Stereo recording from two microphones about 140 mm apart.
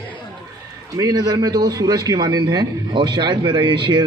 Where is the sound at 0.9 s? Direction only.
25° right (ahead or behind).